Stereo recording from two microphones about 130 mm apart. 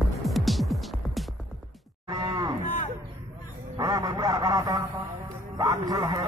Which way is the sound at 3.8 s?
30° right (ahead or behind).